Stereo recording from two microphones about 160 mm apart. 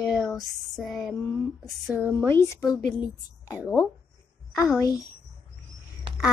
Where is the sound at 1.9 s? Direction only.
10° right (ahead or behind).